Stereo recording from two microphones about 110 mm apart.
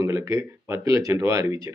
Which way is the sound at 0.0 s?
25° right (ahead or behind).